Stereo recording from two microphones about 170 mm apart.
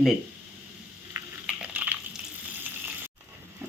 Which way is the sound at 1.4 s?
10° right (ahead or behind).